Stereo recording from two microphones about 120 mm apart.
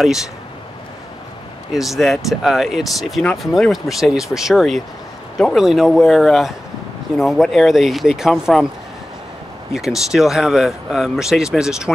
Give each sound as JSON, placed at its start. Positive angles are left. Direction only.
{"t": 1.7, "sound": "speech", "side_deg": 0}
{"t": 9.7, "sound": "speech", "side_deg": -5}